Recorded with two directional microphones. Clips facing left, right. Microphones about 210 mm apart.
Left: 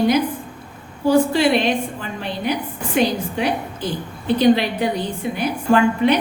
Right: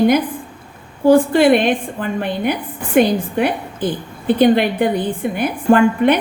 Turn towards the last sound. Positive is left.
turn(degrees=-55)  # may be behind; listen again after turning